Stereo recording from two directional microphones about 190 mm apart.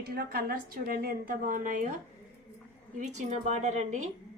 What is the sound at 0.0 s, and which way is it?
A woman's voice, 55° right (ahead or behind).